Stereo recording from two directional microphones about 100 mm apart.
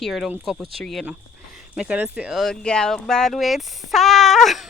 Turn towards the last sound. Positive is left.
turn(degrees=0)  # may be behind; listen again after turning